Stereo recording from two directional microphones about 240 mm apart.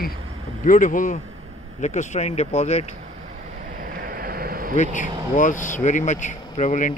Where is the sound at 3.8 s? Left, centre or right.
Right.